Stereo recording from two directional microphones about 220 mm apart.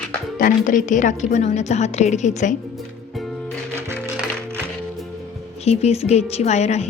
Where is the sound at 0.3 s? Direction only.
40° left (ahead or behind).